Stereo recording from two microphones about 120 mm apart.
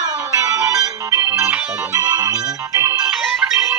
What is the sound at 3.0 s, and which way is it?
Music, 10° right (ahead or behind).